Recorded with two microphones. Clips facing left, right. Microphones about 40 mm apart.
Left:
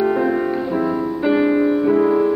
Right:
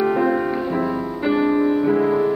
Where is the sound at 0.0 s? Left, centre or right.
Centre.